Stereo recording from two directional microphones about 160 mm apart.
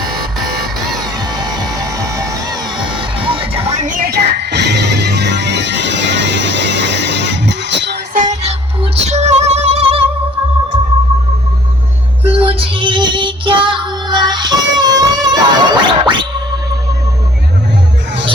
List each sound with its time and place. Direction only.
1.2 s music: 25° right (ahead or behind); by 8.2 s 90° right
8.2 s music: 45° right (ahead or behind)
12.2 s child singing: 35° right (ahead or behind)